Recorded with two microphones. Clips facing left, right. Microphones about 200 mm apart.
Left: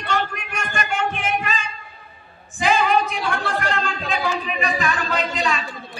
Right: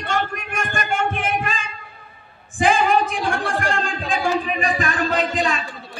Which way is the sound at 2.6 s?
50° right (ahead or behind).